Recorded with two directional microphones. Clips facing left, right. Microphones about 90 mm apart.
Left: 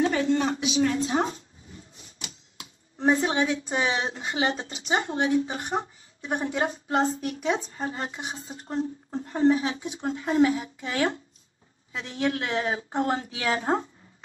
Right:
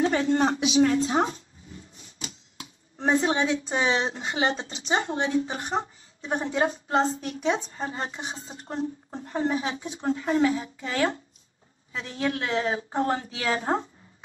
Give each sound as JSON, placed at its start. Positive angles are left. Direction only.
{"t": 0.0, "sound": "speech", "side_deg": -35}
{"t": 1.3, "sound": "dog", "side_deg": 35}
{"t": 2.0, "sound": "typewriter", "side_deg": -35}
{"t": 3.1, "sound": "speech", "side_deg": -30}
{"t": 10.1, "sound": "a woman's voice", "side_deg": 25}
{"t": 12.2, "sound": "a woman's voice", "side_deg": 25}
{"t": 12.7, "sound": "speech", "side_deg": -30}
{"t": 13.1, "sound": "a woman's voice", "side_deg": 20}